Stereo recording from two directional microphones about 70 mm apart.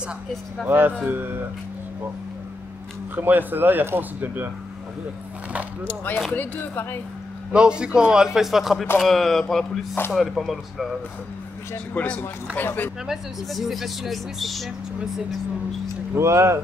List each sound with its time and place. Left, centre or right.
0.7 s speech: right
3.2 s speech: right
5.9 s speech: left
7.5 s a man's voice: centre
11.9 s speech: left
13.0 s speech: centre
16.2 s speech: right